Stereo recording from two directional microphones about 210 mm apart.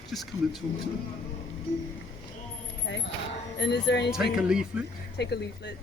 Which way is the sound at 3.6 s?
55° left (ahead or behind).